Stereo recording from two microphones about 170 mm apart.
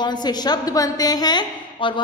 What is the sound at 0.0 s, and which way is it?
A woman's voice, 25° left (ahead or behind).